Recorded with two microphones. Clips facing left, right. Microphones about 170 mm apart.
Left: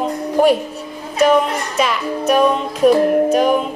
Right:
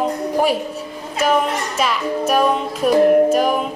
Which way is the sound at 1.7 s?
5° right (ahead or behind).